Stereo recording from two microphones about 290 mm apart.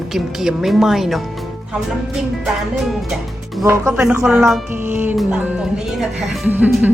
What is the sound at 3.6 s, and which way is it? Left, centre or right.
Speech, centre.